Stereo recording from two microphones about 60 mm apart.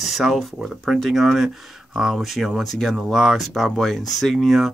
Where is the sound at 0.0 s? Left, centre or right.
Centre.